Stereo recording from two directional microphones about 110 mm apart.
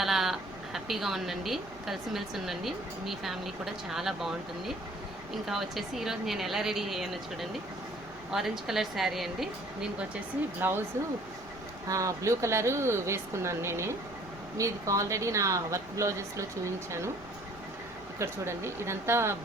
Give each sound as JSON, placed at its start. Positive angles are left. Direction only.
{"t": 0.0, "sound": "speech", "side_deg": 0}
{"t": 10.6, "sound": "speech", "side_deg": -20}
{"t": 11.9, "sound": "speech", "side_deg": -30}
{"t": 18.2, "sound": "speech", "side_deg": -25}